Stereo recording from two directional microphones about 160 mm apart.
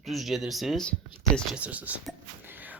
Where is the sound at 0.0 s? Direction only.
Centre (ahead or behind).